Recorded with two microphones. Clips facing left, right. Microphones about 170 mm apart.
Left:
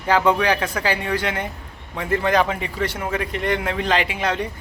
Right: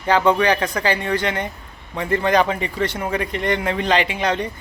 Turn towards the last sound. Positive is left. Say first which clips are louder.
# right 2 dB
turn(degrees=5)  # may be behind; listen again after turning